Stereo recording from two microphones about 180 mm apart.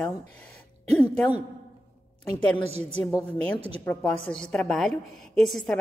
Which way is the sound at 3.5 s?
35° right (ahead or behind).